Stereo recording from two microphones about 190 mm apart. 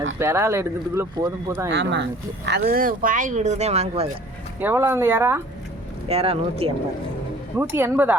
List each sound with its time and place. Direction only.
0.2 s speech: 15° right (ahead or behind)
1.7 s speech: 65° right (ahead or behind)
2.5 s speech: 55° right (ahead or behind); by 4.1 s 35° right (ahead or behind)
4.6 s speech: 10° right (ahead or behind)
6.1 s speech: 30° right (ahead or behind)
7.5 s speech: 10° right (ahead or behind)